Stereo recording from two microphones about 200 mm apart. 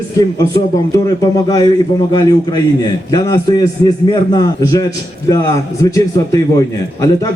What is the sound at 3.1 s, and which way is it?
A man's voice, 20° left (ahead or behind).